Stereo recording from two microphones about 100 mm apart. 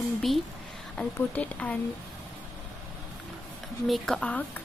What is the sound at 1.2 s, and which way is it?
Speech, 15° left (ahead or behind).